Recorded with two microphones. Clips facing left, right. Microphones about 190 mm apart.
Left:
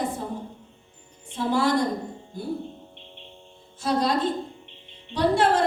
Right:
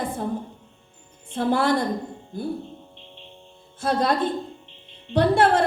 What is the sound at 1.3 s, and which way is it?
Speech, 55° right (ahead or behind).